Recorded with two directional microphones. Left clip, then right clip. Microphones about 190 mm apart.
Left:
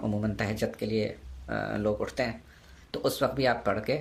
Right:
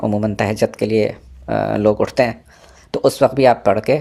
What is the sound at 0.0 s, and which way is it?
Speech, 30° right (ahead or behind).